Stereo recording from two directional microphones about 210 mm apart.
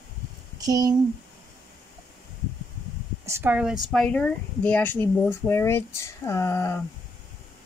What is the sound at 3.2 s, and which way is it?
Speech, 10° right (ahead or behind).